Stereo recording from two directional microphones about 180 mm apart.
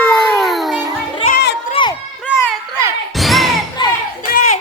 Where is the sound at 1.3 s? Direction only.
75° left (ahead or behind).